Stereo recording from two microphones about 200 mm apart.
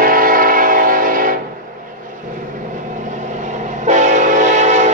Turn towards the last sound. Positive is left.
turn(degrees=-35)  # may be behind; listen again after turning